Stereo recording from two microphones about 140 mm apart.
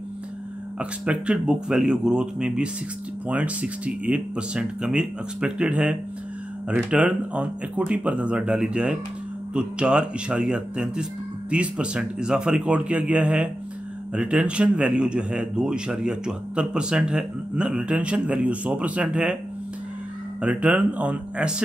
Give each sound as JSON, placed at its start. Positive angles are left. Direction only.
{"t": 0.7, "sound": "a man's voice", "side_deg": -5}
{"t": 20.4, "sound": "a man's voice", "side_deg": -10}